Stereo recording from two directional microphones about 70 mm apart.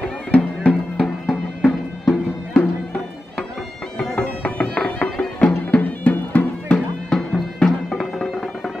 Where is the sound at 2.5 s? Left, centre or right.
Centre.